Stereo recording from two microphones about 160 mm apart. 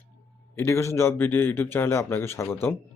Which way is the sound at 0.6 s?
15° left (ahead or behind).